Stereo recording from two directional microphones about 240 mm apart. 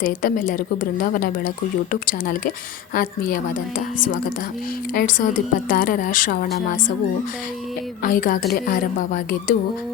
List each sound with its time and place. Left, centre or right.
0.0 s a woman's voice: left
8.0 s a woman's voice: left